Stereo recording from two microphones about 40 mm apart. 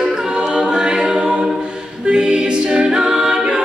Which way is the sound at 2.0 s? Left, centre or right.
Right.